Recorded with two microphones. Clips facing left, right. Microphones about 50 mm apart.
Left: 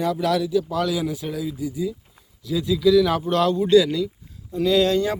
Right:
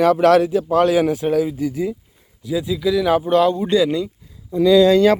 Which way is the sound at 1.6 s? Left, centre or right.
Right.